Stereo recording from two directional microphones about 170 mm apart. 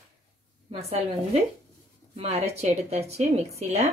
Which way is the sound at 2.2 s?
40° right (ahead or behind).